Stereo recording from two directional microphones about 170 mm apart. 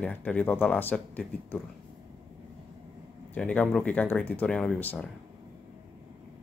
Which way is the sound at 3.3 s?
10° left (ahead or behind).